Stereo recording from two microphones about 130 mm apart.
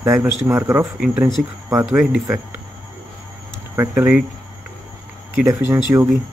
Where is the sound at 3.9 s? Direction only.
10° right (ahead or behind).